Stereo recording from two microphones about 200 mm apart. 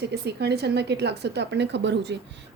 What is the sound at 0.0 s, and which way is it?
A woman's voice, 55° right (ahead or behind).